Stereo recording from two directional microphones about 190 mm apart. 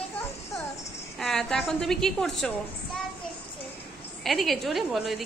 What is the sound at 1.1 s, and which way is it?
A woman's voice, centre (ahead or behind).